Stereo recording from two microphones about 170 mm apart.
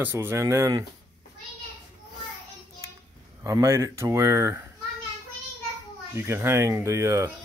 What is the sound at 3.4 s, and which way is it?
Speech, 15° right (ahead or behind).